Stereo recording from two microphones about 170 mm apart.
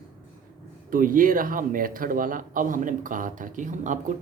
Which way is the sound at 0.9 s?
55° right (ahead or behind).